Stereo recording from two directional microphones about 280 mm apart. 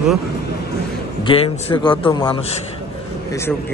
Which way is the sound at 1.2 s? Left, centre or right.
Centre.